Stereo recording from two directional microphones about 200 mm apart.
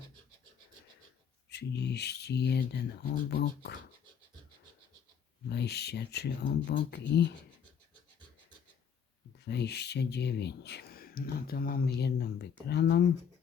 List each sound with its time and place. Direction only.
1.5 s speech: 55° left (ahead or behind)
5.5 s speech: 55° left (ahead or behind)
9.4 s speech: 55° left (ahead or behind)